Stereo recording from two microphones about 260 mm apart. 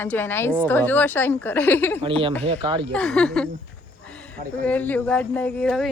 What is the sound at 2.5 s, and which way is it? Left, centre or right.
Speech, centre.